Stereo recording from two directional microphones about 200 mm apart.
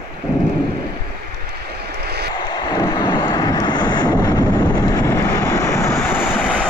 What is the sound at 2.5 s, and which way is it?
Vehicle, 20° left (ahead or behind).